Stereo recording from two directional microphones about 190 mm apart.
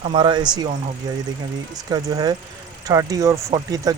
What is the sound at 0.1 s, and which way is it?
Speech, 25° right (ahead or behind).